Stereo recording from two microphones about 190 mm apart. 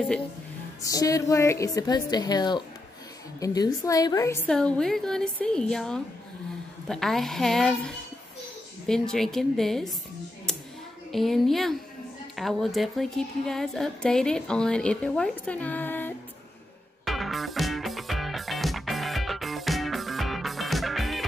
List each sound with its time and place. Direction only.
0.8 s a woman's voice: 15° left (ahead or behind); by 9.9 s centre (ahead or behind)
10.5 s a sound: 5° left (ahead or behind)
11.1 s speech: centre (ahead or behind)
17.0 s music: centre (ahead or behind)